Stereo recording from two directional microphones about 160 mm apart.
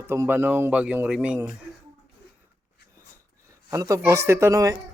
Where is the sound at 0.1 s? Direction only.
15° right (ahead or behind).